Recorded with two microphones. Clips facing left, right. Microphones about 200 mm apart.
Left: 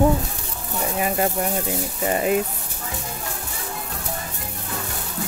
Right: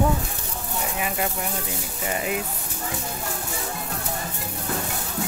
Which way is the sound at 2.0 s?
40° left (ahead or behind).